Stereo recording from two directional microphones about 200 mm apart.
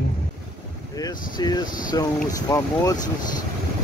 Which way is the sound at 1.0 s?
20° left (ahead or behind).